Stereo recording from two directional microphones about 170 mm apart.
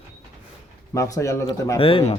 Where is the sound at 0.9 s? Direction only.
20° left (ahead or behind).